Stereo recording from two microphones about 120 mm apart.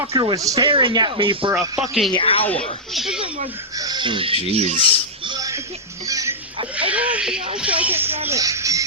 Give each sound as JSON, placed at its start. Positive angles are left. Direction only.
{"t": 0.2, "sound": "speech", "side_deg": -30}
{"t": 0.6, "sound": "speech", "side_deg": -45}
{"t": 1.8, "sound": "speech", "side_deg": 0}
{"t": 2.1, "sound": "speech", "side_deg": 50}
{"t": 2.9, "sound": "speech", "side_deg": 0}
{"t": 3.8, "sound": "speech", "side_deg": -35}
{"t": 4.4, "sound": "speech", "side_deg": -60}
{"t": 5.4, "sound": "music", "side_deg": -25}
{"t": 6.7, "sound": "a sound", "side_deg": -10}